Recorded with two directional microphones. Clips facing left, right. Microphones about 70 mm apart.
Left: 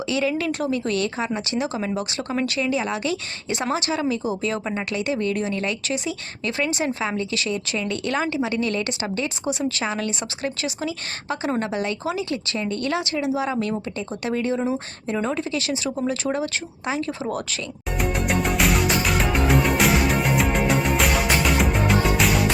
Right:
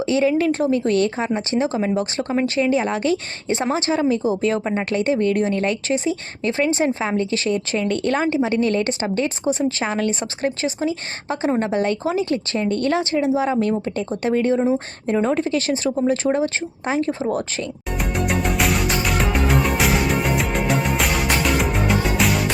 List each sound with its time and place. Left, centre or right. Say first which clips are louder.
0.0 s speech: right 5 dB; right
17.9 s music: even; centre